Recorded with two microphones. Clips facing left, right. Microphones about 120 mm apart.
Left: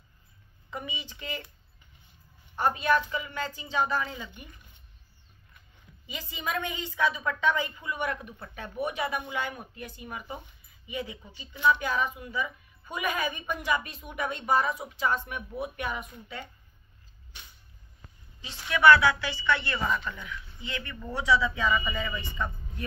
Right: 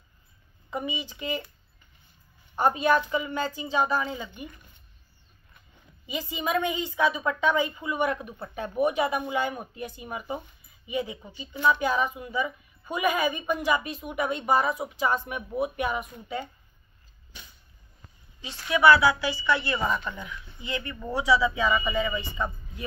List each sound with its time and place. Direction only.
0.7 s a woman's voice: 15° right (ahead or behind)
2.5 s speech: 20° right (ahead or behind)
6.0 s a woman's voice: 15° right (ahead or behind)
11.5 s speech: 35° right (ahead or behind)
11.8 s a woman's voice: 20° right (ahead or behind)
18.7 s a woman's voice: 10° right (ahead or behind)